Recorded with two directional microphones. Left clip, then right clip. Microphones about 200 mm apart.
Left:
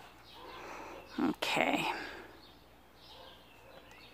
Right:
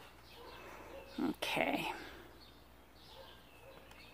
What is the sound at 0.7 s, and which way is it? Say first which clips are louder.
Whispering: left 5 dB; 25° left (ahead or behind).